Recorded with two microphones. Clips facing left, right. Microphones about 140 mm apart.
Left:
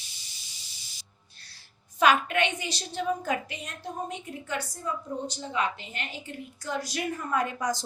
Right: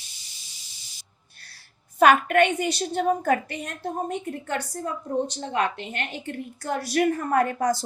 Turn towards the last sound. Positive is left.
turn(degrees=-55)  # may be behind; listen again after turning